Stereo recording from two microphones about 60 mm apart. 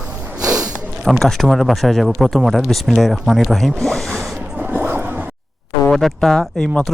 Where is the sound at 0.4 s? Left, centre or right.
Right.